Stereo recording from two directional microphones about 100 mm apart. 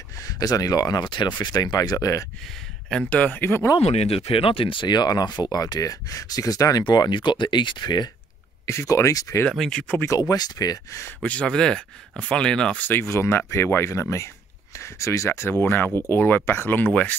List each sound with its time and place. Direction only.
0.2 s speech: 35° left (ahead or behind)
2.4 s speech: 5° left (ahead or behind)
3.1 s speech: 15° left (ahead or behind)
3.8 s speech: 90° left; by 4.8 s 65° left (ahead or behind)
4.8 s speech: 45° left (ahead or behind)
6.8 s speech: 50° left (ahead or behind)
8.6 s speech: 30° left (ahead or behind)
9.5 s speech: 5° left (ahead or behind)
9.9 s speech: 30° left (ahead or behind)
11.2 s speech: 10° left (ahead or behind)
12.8 s speech: 20° left (ahead or behind)